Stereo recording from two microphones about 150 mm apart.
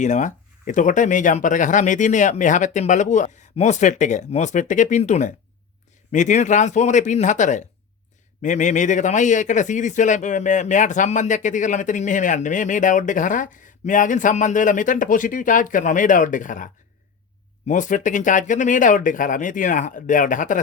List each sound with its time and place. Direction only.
0.0 s speech: 55° left (ahead or behind)
17.7 s speech: 55° left (ahead or behind)